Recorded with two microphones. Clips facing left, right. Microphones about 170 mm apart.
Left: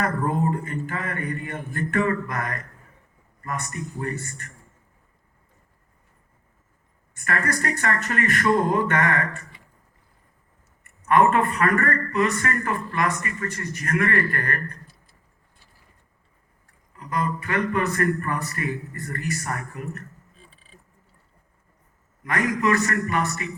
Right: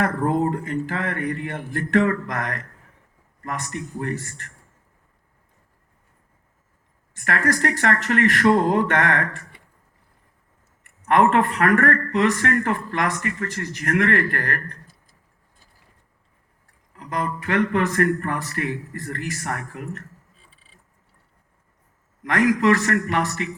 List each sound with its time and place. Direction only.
0.0 s speech: 90° right
7.3 s speech: 85° right
11.1 s speech: 90° right
17.0 s speech: 85° right
22.2 s a man's voice: 85° right